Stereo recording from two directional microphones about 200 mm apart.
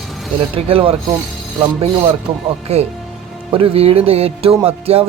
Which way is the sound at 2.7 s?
30° right (ahead or behind).